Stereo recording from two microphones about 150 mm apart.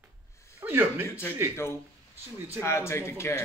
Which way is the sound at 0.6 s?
15° right (ahead or behind).